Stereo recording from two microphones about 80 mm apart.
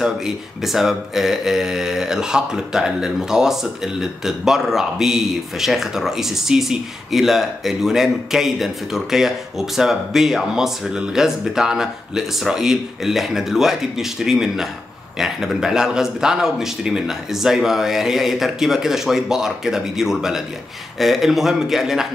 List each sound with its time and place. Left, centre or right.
0.0 s speech: centre